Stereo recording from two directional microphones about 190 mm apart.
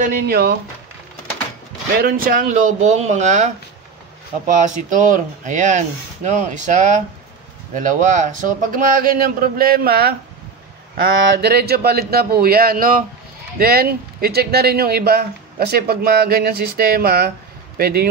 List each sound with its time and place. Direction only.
0.0 s speech: 50° right (ahead or behind)
2.0 s speech: 50° right (ahead or behind)
11.1 s speech: 75° right (ahead or behind); by 18.1 s 55° right (ahead or behind)